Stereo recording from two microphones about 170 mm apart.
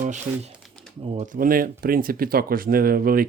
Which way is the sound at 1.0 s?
40° right (ahead or behind).